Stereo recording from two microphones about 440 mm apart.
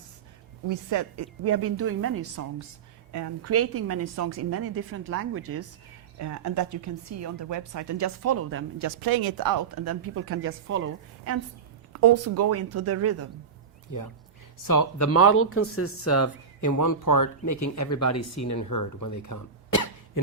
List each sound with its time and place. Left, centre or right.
0.7 s speech: right
9.0 s speech: right
13.9 s speech: left